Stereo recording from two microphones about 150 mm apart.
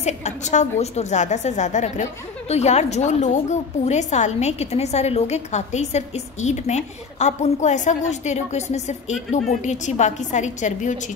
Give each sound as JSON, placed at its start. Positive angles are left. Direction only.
{"t": 0.0, "sound": "a woman's voice", "side_deg": 50}